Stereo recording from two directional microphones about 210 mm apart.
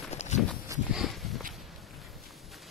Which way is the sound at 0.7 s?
15° right (ahead or behind).